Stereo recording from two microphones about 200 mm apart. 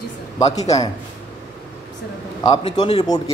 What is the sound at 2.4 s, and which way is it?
Speech, 20° left (ahead or behind).